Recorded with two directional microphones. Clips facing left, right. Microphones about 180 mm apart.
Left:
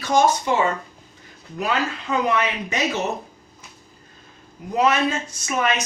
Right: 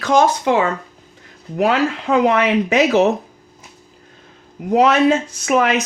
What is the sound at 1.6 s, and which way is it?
Speech, 90° right.